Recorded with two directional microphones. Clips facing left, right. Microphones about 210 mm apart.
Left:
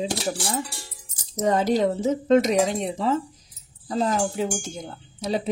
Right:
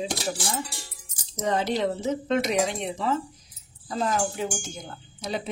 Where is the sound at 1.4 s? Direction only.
40° left (ahead or behind).